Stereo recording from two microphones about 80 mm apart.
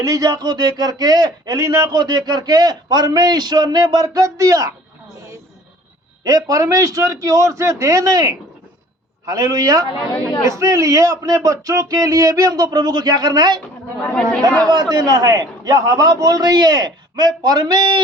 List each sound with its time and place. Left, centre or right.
0.0 s speech: right
2.0 s a man's voice: right
6.2 s a man's voice: right
14.0 s speech: centre
14.7 s a man's voice: right